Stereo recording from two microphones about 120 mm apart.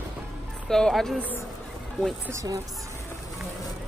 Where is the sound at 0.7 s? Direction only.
5° left (ahead or behind).